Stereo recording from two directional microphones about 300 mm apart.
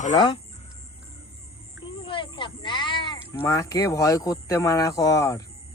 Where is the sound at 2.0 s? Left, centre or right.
Centre.